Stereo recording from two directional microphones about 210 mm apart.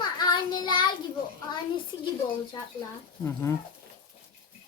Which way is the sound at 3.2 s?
10° left (ahead or behind).